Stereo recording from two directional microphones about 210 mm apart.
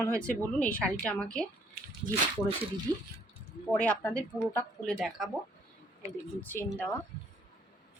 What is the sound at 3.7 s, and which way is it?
A woman's voice, 5° left (ahead or behind).